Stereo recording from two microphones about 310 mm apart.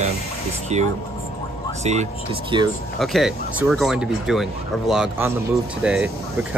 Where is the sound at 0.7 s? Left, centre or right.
Right.